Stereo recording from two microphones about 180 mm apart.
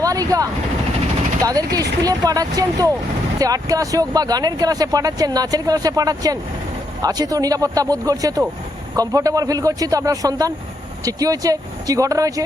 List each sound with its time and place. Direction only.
0.0 s speech: 20° right (ahead or behind)
1.5 s speech: 20° right (ahead or behind)